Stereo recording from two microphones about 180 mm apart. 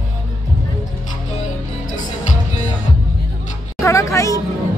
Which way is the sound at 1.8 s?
45° left (ahead or behind).